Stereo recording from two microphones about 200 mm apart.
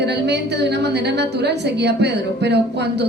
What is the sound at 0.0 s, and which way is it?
A woman's voice, 55° right (ahead or behind).